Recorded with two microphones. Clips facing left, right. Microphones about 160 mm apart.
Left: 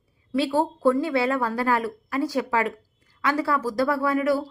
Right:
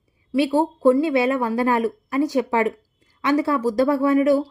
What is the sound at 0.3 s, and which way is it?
A woman's voice, 15° right (ahead or behind).